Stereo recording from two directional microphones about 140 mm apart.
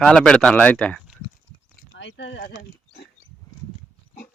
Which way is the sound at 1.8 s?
90° left.